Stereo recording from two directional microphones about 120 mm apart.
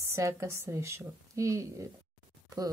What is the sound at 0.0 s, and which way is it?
Speech, 25° right (ahead or behind).